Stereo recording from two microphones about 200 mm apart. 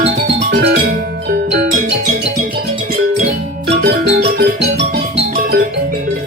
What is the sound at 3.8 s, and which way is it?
Music, 50° right (ahead or behind).